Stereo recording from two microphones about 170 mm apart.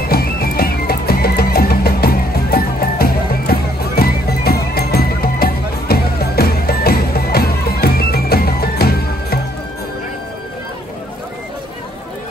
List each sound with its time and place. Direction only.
0.1 s music: 65° left (ahead or behind)